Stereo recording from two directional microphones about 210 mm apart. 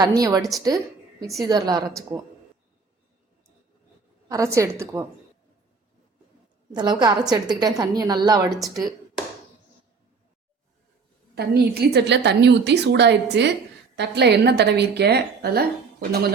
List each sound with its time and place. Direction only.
0.0 s a woman's voice: 15° right (ahead or behind)
4.3 s a woman's voice: 15° right (ahead or behind)
6.7 s a woman's voice: 20° right (ahead or behind)
11.3 s a woman's voice: 50° right (ahead or behind)